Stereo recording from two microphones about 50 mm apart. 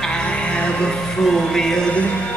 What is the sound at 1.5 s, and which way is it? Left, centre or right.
Speech, centre.